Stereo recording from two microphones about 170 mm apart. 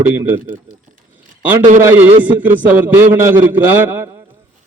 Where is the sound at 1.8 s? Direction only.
15° right (ahead or behind).